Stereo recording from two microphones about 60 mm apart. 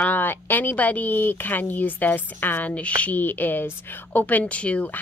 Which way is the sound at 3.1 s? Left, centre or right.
Left.